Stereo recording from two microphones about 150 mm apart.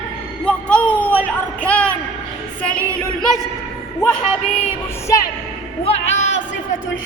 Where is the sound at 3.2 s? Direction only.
Centre (ahead or behind).